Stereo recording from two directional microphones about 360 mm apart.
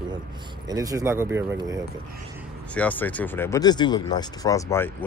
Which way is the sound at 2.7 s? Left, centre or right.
Centre.